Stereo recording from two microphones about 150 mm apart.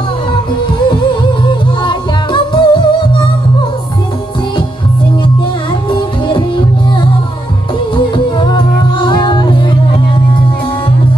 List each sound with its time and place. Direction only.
1.5 s music: 30° left (ahead or behind)
5.9 s music: 30° left (ahead or behind)